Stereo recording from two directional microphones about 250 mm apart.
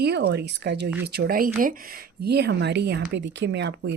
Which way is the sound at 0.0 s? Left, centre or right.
Right.